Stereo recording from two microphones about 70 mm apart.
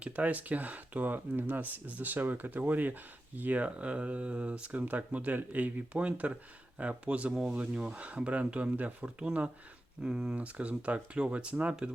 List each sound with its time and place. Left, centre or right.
0.0 s speech: right
10.3 s speech: centre